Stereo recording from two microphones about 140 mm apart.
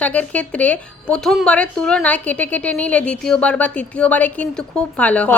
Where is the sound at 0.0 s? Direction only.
10° left (ahead or behind).